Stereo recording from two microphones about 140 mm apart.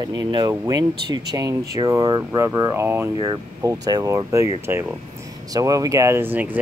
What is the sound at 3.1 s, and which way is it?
Speech, 30° right (ahead or behind).